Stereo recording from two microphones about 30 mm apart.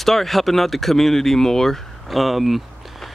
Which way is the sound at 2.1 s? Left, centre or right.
Centre.